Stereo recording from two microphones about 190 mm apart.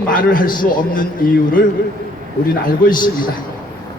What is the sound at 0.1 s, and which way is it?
A man's voice, 50° left (ahead or behind).